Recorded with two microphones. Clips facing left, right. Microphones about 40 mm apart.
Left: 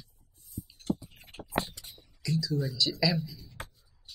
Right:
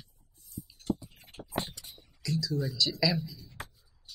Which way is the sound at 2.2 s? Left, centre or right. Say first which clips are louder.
Left 1 dB; centre.